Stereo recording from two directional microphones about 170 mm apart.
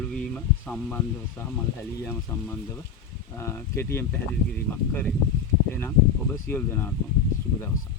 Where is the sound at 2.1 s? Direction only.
10° left (ahead or behind).